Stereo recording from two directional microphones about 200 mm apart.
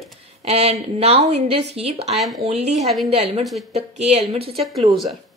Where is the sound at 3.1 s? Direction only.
30° right (ahead or behind).